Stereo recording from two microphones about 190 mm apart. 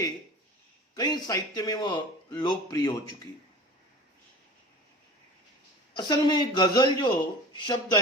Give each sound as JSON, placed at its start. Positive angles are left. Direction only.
{"t": 0.9, "sound": "speech", "side_deg": 20}
{"t": 6.0, "sound": "speech", "side_deg": 20}